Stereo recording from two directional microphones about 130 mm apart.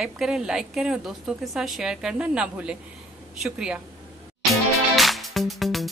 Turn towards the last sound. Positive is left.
turn(degrees=0)  # may be behind; listen again after turning